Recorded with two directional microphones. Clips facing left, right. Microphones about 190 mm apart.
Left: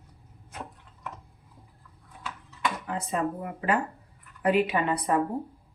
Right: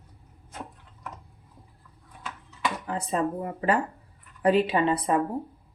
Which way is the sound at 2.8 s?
30° right (ahead or behind).